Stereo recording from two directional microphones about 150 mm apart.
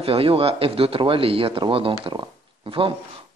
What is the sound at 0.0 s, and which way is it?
Speech, 40° right (ahead or behind).